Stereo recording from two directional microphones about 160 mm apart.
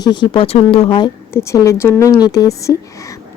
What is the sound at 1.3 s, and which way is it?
Speech, 20° left (ahead or behind).